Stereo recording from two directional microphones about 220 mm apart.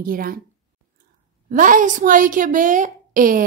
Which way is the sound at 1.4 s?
35° right (ahead or behind).